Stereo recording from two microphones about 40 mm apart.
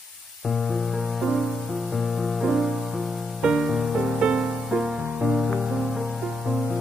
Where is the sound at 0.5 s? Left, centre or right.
Centre.